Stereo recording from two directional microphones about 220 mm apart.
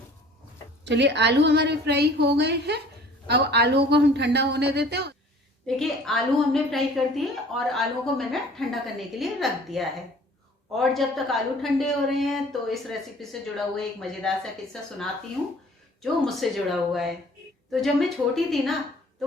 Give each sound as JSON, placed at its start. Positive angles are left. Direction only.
{"t": 0.9, "sound": "a woman's voice", "side_deg": -50}
{"t": 5.6, "sound": "a woman's voice", "side_deg": 0}